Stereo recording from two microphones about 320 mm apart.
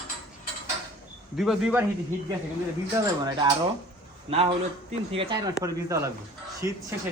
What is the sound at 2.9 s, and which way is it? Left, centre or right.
A man's voice, centre.